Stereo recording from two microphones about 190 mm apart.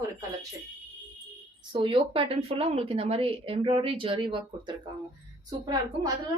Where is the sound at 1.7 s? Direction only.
25° right (ahead or behind).